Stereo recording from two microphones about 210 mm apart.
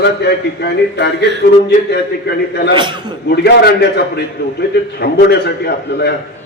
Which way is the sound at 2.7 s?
20° right (ahead or behind).